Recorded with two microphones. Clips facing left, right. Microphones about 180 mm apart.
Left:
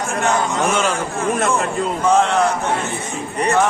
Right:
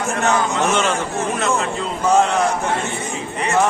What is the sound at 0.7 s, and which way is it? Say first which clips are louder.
Speech: even; 5° left (ahead or behind).